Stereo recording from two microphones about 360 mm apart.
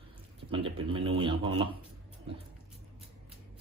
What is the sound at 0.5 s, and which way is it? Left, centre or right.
Speech, centre.